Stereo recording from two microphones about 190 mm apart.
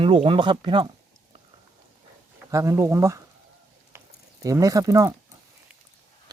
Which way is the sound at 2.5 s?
15° right (ahead or behind).